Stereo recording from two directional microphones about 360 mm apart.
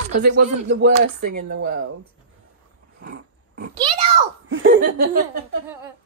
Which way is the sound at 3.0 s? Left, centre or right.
Right.